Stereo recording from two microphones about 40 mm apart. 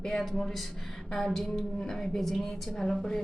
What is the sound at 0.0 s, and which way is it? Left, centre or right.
A woman's voice, centre.